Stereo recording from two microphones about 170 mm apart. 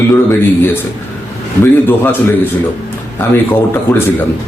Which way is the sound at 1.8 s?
10° left (ahead or behind).